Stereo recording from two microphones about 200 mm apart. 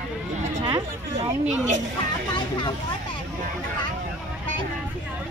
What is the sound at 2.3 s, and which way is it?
Speech, 20° left (ahead or behind).